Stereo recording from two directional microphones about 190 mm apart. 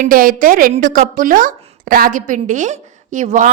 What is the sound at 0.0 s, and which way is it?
A woman's voice, 50° right (ahead or behind).